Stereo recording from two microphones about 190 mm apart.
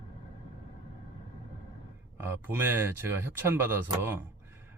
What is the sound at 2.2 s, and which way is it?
Speech, 10° right (ahead or behind).